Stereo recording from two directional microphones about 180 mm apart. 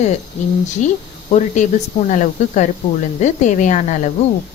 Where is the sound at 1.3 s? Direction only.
40° left (ahead or behind).